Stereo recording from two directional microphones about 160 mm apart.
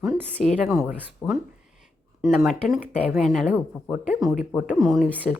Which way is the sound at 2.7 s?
10° right (ahead or behind).